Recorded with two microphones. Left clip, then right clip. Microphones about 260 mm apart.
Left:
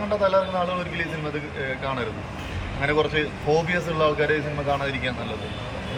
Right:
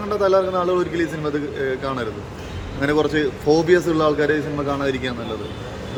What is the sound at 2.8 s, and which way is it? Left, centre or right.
Speech, centre.